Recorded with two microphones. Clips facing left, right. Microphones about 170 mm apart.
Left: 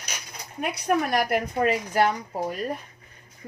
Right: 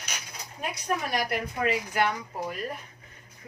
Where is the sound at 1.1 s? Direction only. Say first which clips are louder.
Left 5 dB; 50° left (ahead or behind).